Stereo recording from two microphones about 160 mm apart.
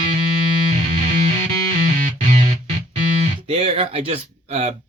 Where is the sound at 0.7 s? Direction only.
45° right (ahead or behind).